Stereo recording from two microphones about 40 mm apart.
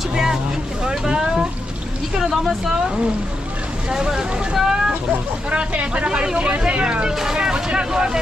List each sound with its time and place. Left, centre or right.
0.1 s vehicle: centre
2.1 s speech: centre
3.9 s speech: centre
5.5 s speech: right
7.1 s speech: centre